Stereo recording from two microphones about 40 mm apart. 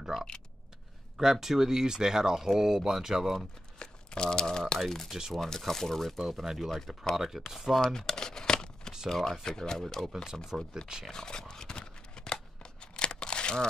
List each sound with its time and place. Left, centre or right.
1.1 s speech: centre
3.3 s speech: centre
6.1 s speech: centre
7.8 s crumpling: centre
9.1 s speech: centre
10.0 s speech: centre
11.1 s a sound: centre
12.9 s tearing: left